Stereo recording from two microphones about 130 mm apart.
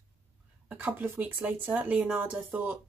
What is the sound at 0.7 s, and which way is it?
Speech, 15° right (ahead or behind).